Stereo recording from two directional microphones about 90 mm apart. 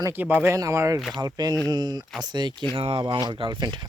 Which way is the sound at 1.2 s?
50° right (ahead or behind).